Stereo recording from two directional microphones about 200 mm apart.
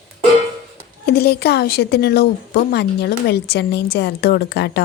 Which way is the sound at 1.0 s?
55° left (ahead or behind).